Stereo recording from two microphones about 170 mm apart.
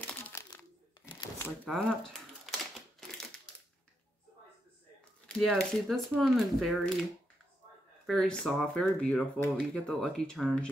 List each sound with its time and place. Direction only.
0.0 s crumpling: 15° left (ahead or behind)
1.0 s shuffling cards: 20° left (ahead or behind)
1.6 s speech: 5° left (ahead or behind)
5.2 s speech: 5° left (ahead or behind)
8.1 s speech: centre (ahead or behind)